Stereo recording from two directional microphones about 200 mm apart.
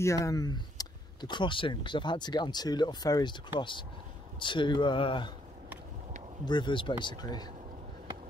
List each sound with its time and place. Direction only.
0.0 s speech: 15° left (ahead or behind)
6.4 s speech: 20° left (ahead or behind)